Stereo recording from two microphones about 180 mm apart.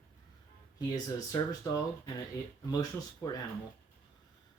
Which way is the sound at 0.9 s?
20° left (ahead or behind).